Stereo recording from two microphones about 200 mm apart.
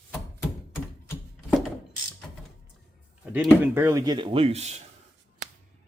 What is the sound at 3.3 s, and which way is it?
Speech, 10° right (ahead or behind).